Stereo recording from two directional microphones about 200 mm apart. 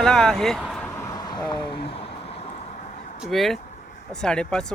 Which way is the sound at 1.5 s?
25° left (ahead or behind).